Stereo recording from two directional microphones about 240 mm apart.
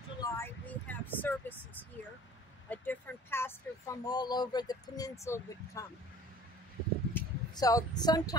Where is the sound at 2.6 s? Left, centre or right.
Centre.